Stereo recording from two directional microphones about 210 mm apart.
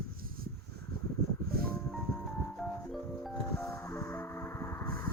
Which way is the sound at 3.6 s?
10° left (ahead or behind).